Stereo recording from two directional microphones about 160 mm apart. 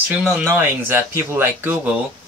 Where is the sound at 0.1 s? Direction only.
10° right (ahead or behind).